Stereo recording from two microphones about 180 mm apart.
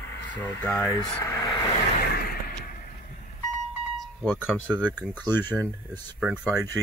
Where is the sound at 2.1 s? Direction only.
55° left (ahead or behind).